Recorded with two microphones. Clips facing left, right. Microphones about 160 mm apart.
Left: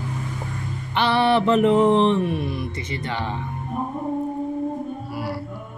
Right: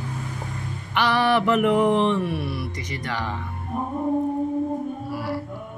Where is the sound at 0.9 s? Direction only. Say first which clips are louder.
Left 2 dB; 25° left (ahead or behind).